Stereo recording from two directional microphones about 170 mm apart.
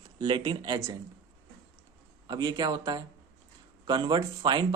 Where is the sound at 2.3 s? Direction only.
20° right (ahead or behind).